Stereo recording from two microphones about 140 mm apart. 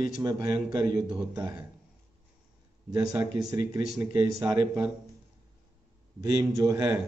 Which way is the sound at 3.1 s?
25° right (ahead or behind).